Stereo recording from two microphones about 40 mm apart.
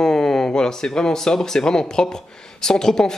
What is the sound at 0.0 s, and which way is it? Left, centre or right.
Speech, centre.